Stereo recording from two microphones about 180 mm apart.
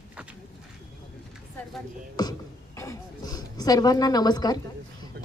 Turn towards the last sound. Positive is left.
turn(degrees=-60)  # may be behind; listen again after turning